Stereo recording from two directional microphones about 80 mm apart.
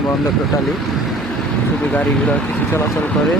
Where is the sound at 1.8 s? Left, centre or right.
Centre.